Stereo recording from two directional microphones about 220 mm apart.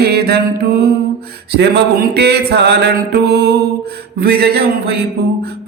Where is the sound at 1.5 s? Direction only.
50° right (ahead or behind).